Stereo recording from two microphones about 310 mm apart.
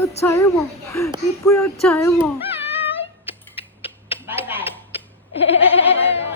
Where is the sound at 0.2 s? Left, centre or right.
Centre.